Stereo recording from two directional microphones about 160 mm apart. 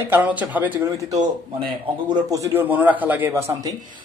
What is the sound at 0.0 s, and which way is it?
Speech, 10° right (ahead or behind).